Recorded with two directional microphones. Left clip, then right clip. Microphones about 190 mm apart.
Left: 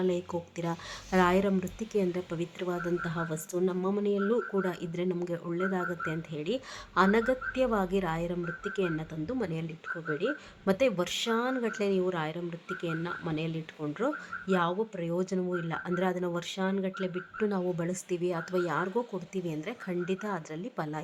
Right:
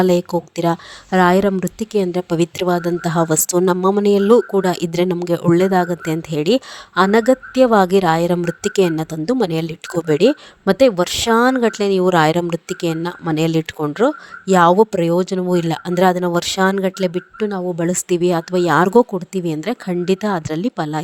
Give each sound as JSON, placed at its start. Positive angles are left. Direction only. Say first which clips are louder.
{"t": 0.0, "sound": "speech", "louder": "right 15 dB", "side_deg": -50}
{"t": 10.7, "sound": "speech", "louder": "right 14 dB", "side_deg": -45}
{"t": 15.5, "sound": "speech", "louder": "right 15 dB", "side_deg": -55}
{"t": 17.4, "sound": "speech", "louder": "right 9 dB", "side_deg": -30}
{"t": 17.7, "sound": "speech", "louder": "right 15 dB", "side_deg": -45}